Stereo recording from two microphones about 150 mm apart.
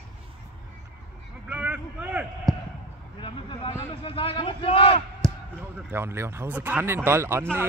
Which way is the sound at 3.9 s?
35° left (ahead or behind).